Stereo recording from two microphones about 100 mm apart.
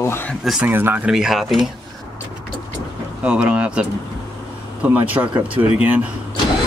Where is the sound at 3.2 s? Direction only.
10° right (ahead or behind).